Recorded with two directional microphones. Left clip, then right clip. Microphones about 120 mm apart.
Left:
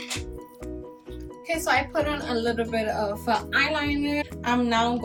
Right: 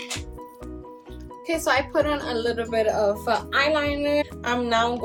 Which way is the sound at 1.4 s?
25° right (ahead or behind).